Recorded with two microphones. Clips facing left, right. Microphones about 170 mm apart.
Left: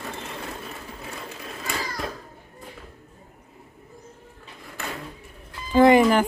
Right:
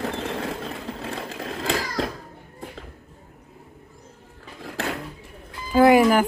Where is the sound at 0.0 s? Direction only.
90° right.